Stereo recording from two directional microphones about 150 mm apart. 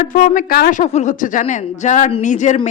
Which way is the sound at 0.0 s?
65° left (ahead or behind).